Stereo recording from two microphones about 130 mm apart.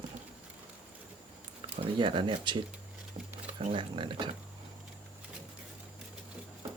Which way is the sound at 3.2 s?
60° right (ahead or behind).